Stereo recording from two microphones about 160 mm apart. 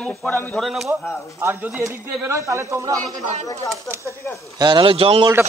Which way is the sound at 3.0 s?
45° right (ahead or behind).